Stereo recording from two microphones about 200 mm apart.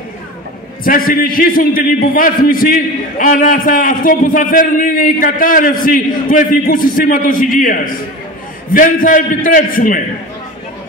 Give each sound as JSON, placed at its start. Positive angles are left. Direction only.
{"t": 0.8, "sound": "a man's voice", "side_deg": 45}